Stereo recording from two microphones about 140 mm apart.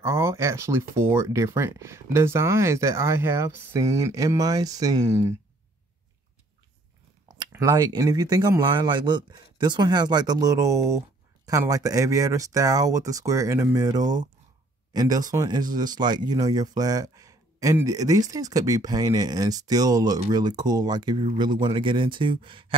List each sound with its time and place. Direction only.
0.0 s speech: 20° right (ahead or behind)
7.5 s speech: 20° right (ahead or behind); by 22.8 s 40° right (ahead or behind)